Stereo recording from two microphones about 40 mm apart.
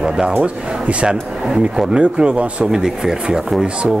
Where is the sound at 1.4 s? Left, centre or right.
Centre.